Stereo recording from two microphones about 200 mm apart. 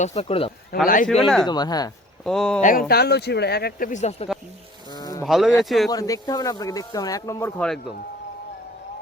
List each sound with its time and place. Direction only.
0.0 s speech: 30° left (ahead or behind)
0.7 s speech: 50° left (ahead or behind)
1.2 s speech: centre (ahead or behind)
1.5 s speech: 20° left (ahead or behind)
2.2 s speech: 5° left (ahead or behind)
2.6 s speech: 40° left (ahead or behind)
4.9 s insect: 20° left (ahead or behind)
5.2 s speech: centre (ahead or behind)
5.9 s speech: 20° left (ahead or behind)
7.6 s speech: centre (ahead or behind)